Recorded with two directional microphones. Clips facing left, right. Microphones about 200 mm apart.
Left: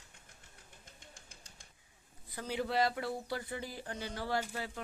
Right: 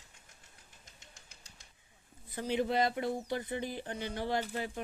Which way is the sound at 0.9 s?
50° left (ahead or behind).